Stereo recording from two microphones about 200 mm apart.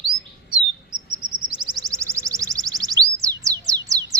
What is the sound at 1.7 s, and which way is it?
Chirp tone, 15° right (ahead or behind).